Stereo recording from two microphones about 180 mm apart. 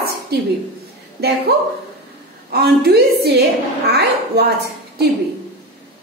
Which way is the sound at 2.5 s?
65° right (ahead or behind).